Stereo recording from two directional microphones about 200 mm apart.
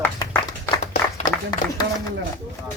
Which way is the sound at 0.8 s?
35° left (ahead or behind).